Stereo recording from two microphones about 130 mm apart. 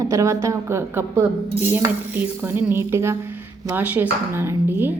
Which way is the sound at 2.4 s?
15° right (ahead or behind).